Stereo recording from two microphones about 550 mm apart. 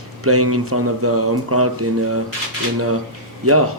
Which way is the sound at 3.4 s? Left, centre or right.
Right.